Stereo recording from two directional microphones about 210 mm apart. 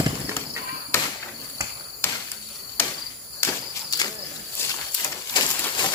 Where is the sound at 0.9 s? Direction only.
10° left (ahead or behind).